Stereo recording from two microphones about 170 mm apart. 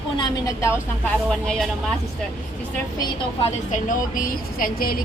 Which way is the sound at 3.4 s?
45° left (ahead or behind).